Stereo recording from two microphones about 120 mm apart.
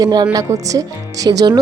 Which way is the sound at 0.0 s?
35° right (ahead or behind).